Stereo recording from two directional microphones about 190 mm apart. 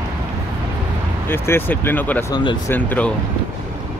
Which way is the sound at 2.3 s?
25° left (ahead or behind).